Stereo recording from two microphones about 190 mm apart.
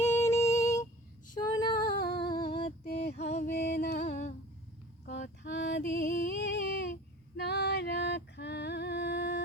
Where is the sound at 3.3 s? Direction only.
40° left (ahead or behind).